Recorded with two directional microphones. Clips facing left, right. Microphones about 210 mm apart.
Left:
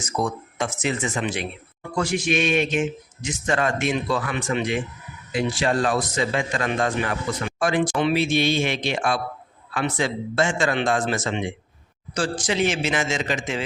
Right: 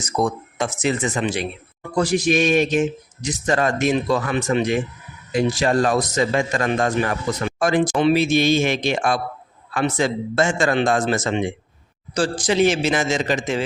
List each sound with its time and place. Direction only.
0.0 s speech: 35° right (ahead or behind)